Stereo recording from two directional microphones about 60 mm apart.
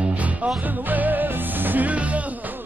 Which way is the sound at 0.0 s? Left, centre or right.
Right.